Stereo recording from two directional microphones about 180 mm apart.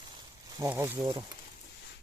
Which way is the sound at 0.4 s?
20° right (ahead or behind).